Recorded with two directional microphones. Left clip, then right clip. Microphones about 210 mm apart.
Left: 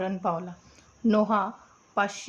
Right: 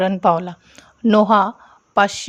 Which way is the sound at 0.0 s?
45° right (ahead or behind).